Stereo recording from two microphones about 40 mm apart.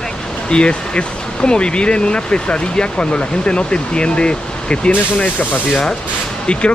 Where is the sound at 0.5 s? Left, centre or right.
Left.